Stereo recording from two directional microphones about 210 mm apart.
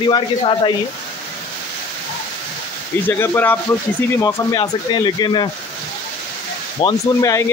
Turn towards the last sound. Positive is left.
turn(degrees=15)  # may be behind; listen again after turning